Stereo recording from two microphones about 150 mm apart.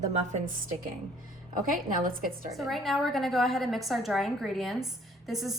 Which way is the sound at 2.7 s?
Centre (ahead or behind).